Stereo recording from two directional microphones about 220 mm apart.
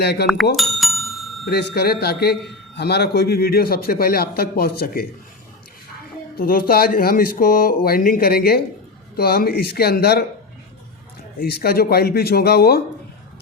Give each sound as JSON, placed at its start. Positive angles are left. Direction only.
{"t": 0.0, "sound": "a man's voice", "side_deg": 50}
{"t": 0.5, "sound": "bicycle bell", "side_deg": 0}
{"t": 1.5, "sound": "a man's voice", "side_deg": 45}
{"t": 6.3, "sound": "a man's voice", "side_deg": 40}
{"t": 11.3, "sound": "a man's voice", "side_deg": 45}